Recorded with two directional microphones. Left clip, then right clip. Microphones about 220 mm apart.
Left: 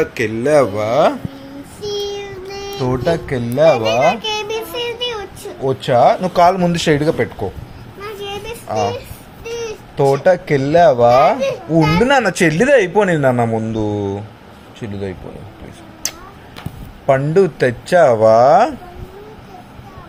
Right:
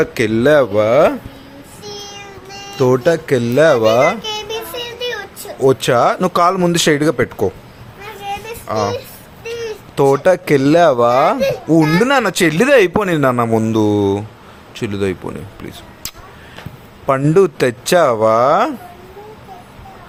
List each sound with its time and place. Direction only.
0.0 s speech: 40° right (ahead or behind)
1.8 s child singing: 5° right (ahead or behind)
2.7 s speech: 40° right (ahead or behind)
4.2 s child singing: centre (ahead or behind)
5.5 s speech: 35° right (ahead or behind)
8.2 s a sound: 5° right (ahead or behind)
8.6 s a child's voice: 15° right (ahead or behind)
9.4 s a sound: 10° right (ahead or behind)
9.9 s a man's voice: 35° right (ahead or behind)
13.7 s speech: 40° right (ahead or behind)
16.0 s a sound: 25° right (ahead or behind)
17.1 s a man's voice: 30° right (ahead or behind)